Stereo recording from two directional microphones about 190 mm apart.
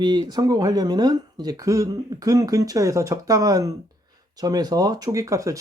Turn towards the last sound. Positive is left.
turn(degrees=-15)  # may be behind; listen again after turning